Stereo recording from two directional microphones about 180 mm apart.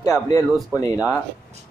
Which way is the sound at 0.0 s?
15° left (ahead or behind).